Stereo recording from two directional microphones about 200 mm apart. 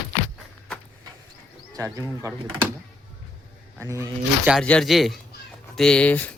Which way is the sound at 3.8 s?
15° right (ahead or behind).